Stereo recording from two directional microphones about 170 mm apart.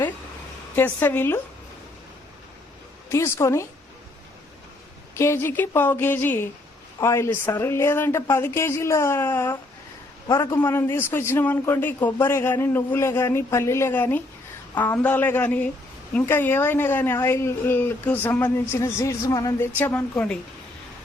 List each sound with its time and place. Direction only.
0.8 s a woman's voice: 10° left (ahead or behind)
3.1 s a woman's voice: 15° left (ahead or behind)
5.1 s a woman's voice: 15° left (ahead or behind)